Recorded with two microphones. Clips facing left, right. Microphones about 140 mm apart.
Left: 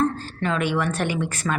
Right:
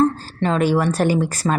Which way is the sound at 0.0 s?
35° right (ahead or behind).